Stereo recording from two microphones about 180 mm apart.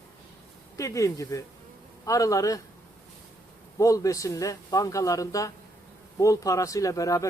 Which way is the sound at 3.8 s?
20° left (ahead or behind).